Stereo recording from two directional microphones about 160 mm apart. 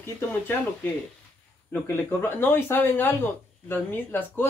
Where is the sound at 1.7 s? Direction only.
15° left (ahead or behind).